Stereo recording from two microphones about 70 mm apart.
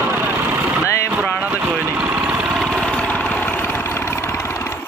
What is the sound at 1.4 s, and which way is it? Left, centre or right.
Speech, right.